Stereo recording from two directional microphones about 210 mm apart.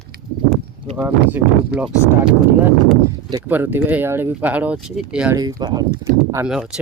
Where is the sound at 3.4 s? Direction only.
10° right (ahead or behind).